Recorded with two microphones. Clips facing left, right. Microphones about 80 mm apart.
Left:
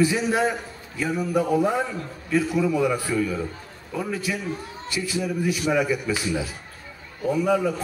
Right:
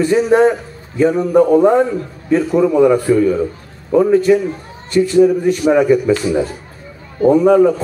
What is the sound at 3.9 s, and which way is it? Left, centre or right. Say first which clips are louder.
Speech: right 17 dB; right.